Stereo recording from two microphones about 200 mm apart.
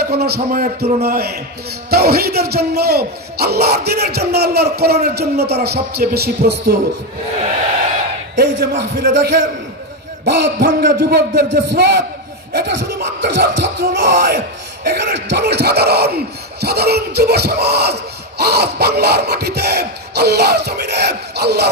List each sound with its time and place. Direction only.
0.0 s a man's voice: 50° right (ahead or behind)
8.4 s a man's voice: 50° right (ahead or behind)
13.2 s speech: 55° right (ahead or behind)